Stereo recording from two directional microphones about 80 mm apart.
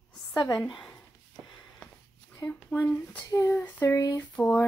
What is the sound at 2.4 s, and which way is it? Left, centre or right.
Speech, left.